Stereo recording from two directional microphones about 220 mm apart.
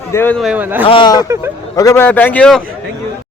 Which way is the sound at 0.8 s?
20° left (ahead or behind).